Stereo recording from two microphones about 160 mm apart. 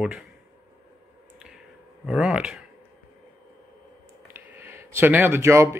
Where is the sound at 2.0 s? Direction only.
5° right (ahead or behind).